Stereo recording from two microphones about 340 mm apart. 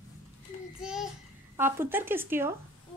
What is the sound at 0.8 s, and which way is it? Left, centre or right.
Child singing, centre.